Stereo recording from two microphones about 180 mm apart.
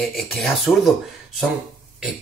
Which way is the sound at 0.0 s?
Centre (ahead or behind).